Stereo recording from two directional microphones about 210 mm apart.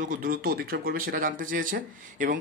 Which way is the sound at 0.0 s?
40° right (ahead or behind).